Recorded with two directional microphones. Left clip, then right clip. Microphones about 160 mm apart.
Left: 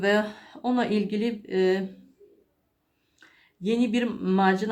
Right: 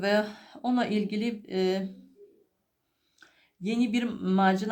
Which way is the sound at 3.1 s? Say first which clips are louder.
Left 2 dB; 30° right (ahead or behind).